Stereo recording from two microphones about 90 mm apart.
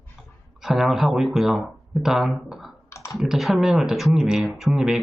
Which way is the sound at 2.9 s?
30° left (ahead or behind).